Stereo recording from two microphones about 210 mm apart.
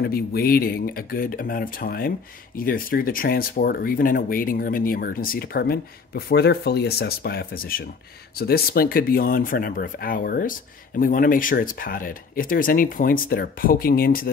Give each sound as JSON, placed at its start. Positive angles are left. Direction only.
{"t": 0.0, "sound": "speech", "side_deg": 45}